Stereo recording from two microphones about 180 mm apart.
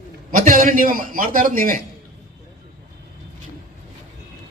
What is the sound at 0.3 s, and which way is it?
A man's voice, 50° right (ahead or behind).